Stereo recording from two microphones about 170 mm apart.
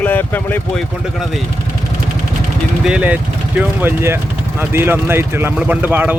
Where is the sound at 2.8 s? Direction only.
5° right (ahead or behind).